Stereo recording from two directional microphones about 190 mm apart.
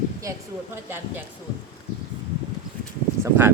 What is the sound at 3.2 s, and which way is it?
Speech, 10° right (ahead or behind).